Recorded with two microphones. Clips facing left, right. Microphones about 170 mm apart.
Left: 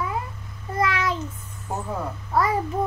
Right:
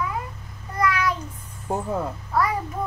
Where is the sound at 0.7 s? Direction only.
25° left (ahead or behind).